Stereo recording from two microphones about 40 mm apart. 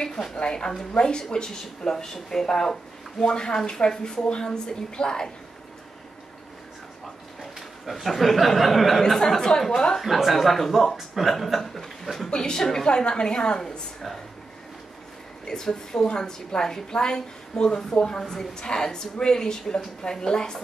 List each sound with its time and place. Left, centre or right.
0.0 s a sound: centre
0.4 s a woman's voice: left
7.8 s a man's voice: centre
9.0 s a woman's voice: centre
10.0 s a man's voice: centre
12.3 s a woman's voice: centre
15.4 s a woman's voice: centre